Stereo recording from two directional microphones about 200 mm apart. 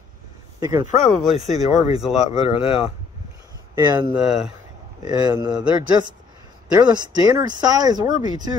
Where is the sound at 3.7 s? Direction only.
20° right (ahead or behind).